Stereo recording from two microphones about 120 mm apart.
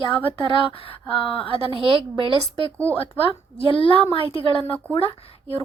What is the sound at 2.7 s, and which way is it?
Speech, 15° left (ahead or behind).